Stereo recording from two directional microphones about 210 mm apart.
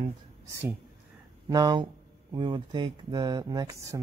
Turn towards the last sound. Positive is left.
turn(degrees=-15)  # may be behind; listen again after turning